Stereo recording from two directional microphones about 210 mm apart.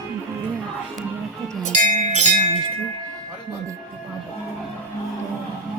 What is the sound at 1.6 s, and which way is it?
Music, 35° right (ahead or behind).